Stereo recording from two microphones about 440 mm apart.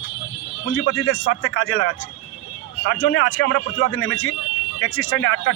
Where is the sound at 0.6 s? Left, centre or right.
Left.